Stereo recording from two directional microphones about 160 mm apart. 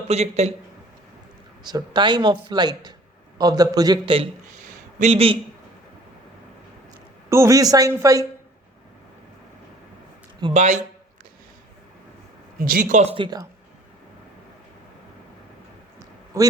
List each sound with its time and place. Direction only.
0.1 s speech: 40° right (ahead or behind)
1.6 s speech: 25° right (ahead or behind)
4.5 s a sound: 50° right (ahead or behind)
7.3 s speech: 20° right (ahead or behind)
10.5 s speech: 45° right (ahead or behind)
12.5 s speech: 60° right (ahead or behind); by 13.5 s 25° right (ahead or behind)
16.3 s speech: 20° right (ahead or behind)